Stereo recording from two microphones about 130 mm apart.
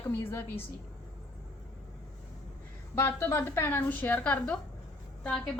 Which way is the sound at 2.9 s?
20° left (ahead or behind).